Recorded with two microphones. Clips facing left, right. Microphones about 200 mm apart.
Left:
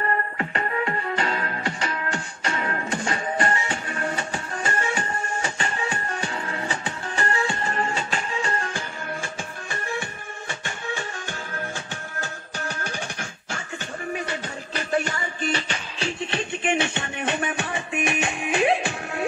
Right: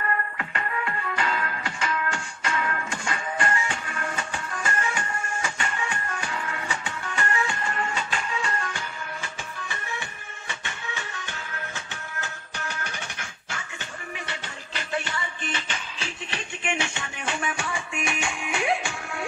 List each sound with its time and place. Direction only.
0.0 s music: 35° left (ahead or behind)
9.7 s music: 45° left (ahead or behind)
17.9 s music: 20° left (ahead or behind)